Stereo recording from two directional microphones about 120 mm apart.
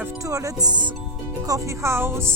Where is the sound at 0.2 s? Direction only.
25° right (ahead or behind).